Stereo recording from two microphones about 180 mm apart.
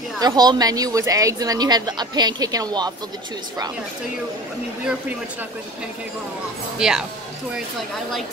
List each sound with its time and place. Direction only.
0.2 s a woman's voice: 20° right (ahead or behind)
6.8 s speech: 5° right (ahead or behind)